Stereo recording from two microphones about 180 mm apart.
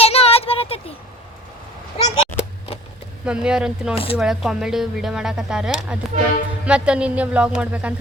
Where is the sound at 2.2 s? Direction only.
35° left (ahead or behind).